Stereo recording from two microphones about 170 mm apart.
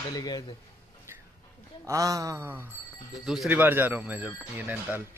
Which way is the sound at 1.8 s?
20° right (ahead or behind).